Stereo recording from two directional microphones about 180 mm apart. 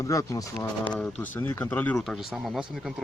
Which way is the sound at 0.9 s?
5° left (ahead or behind).